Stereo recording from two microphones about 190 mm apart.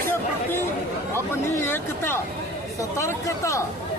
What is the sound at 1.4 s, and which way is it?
Speech, 15° left (ahead or behind).